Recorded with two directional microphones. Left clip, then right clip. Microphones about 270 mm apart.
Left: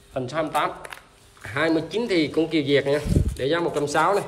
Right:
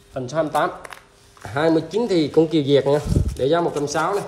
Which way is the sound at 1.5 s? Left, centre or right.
Centre.